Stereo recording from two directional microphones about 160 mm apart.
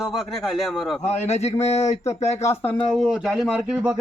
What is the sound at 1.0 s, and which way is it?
Speech, 40° left (ahead or behind).